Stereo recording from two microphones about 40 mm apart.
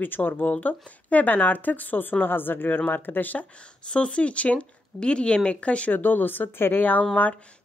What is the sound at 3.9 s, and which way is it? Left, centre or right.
Speech, left.